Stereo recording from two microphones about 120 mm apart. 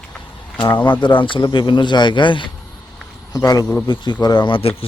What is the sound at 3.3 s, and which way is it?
Speech, 30° left (ahead or behind).